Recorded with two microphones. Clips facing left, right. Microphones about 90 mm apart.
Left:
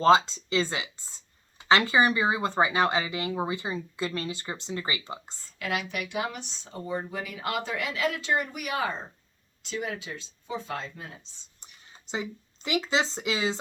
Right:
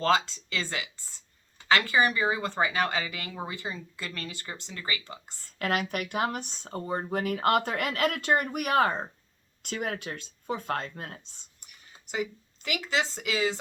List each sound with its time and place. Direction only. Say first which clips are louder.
0.0 s speech: left 5 dB; 20° left (ahead or behind)
5.5 s speech: right 2 dB; 45° right (ahead or behind)
11.6 s speech: left 2 dB; 25° left (ahead or behind)